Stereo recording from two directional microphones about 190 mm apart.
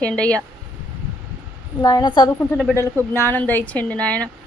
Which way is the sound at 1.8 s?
20° left (ahead or behind).